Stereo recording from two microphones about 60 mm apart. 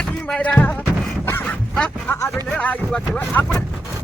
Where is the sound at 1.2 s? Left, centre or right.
Left.